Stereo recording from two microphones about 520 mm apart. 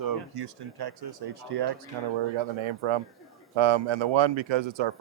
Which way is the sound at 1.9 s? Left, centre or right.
Right.